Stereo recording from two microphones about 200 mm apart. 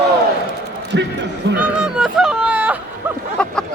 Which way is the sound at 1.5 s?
5° right (ahead or behind).